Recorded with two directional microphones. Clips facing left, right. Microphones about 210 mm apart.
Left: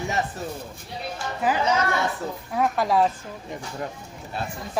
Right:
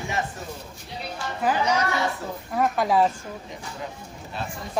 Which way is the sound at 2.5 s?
Centre (ahead or behind).